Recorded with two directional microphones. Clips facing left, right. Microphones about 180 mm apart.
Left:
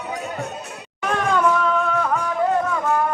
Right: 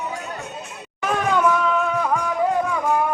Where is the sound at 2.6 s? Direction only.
10° right (ahead or behind).